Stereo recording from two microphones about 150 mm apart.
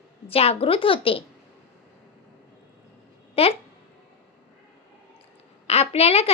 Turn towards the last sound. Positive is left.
turn(degrees=40)  # may be behind; listen again after turning